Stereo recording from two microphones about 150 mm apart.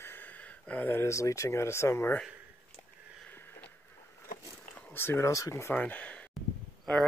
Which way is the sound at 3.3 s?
10° left (ahead or behind).